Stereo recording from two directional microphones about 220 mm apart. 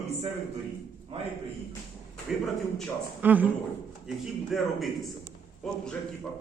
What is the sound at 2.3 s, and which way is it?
A man's voice, centre (ahead or behind).